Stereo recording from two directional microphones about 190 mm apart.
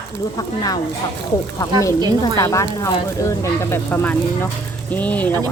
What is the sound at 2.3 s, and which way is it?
A woman's voice, 15° left (ahead or behind).